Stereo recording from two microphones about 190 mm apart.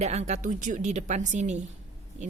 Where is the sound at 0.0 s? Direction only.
35° right (ahead or behind).